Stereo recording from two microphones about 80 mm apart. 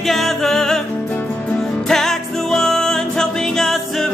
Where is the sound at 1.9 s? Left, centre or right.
Centre.